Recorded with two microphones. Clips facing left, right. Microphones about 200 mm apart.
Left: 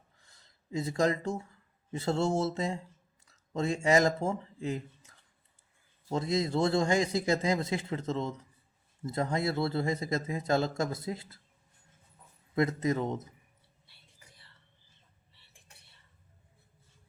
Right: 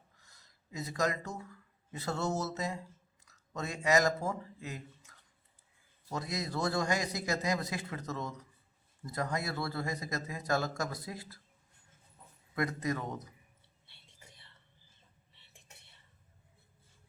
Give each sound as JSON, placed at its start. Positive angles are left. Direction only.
{"t": 0.3, "sound": "a man's voice", "side_deg": 30}
{"t": 12.5, "sound": "a man's voice", "side_deg": 25}
{"t": 13.8, "sound": "whispering", "side_deg": -25}